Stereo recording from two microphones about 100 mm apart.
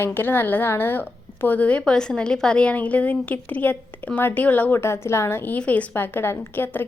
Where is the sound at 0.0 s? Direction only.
20° left (ahead or behind).